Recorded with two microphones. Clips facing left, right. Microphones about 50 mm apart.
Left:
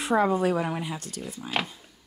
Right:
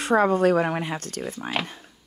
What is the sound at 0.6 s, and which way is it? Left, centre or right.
Speech, right.